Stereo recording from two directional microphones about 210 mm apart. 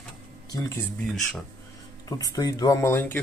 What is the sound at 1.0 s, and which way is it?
Speech, centre (ahead or behind).